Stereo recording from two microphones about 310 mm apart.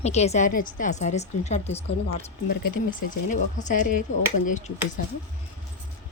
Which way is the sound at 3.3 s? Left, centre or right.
Left.